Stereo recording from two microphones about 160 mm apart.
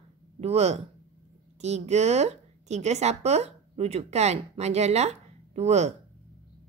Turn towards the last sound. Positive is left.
turn(degrees=-45)  # may be behind; listen again after turning